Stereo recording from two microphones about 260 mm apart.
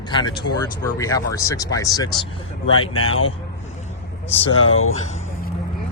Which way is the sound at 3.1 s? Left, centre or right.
Left.